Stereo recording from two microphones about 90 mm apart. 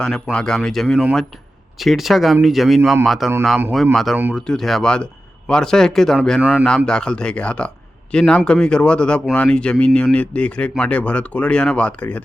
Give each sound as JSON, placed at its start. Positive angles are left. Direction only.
{"t": 0.0, "sound": "speech", "side_deg": 10}
{"t": 6.4, "sound": "a man's voice", "side_deg": -15}
{"t": 6.7, "sound": "speech", "side_deg": 10}